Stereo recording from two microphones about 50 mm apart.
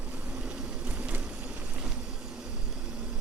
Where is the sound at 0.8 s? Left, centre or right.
Right.